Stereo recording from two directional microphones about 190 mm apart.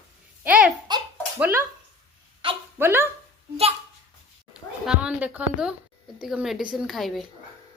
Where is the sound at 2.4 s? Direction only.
25° right (ahead or behind).